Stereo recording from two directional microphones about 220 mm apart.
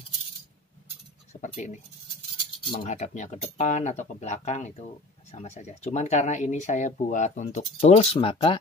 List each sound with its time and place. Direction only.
1.3 s speech: 30° left (ahead or behind)
2.8 s speech: 35° left (ahead or behind)